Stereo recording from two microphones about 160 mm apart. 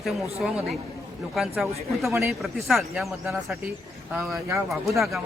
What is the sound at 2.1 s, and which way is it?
Speech, 15° right (ahead or behind).